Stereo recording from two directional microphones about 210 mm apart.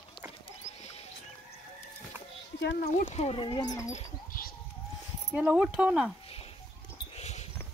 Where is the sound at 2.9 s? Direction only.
30° left (ahead or behind).